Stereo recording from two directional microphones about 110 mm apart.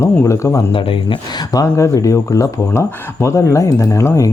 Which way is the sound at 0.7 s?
55° left (ahead or behind).